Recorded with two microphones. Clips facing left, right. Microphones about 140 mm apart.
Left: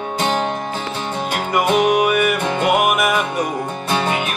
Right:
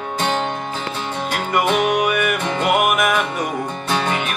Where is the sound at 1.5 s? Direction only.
5° left (ahead or behind).